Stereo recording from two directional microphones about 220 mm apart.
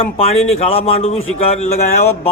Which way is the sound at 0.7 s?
25° left (ahead or behind).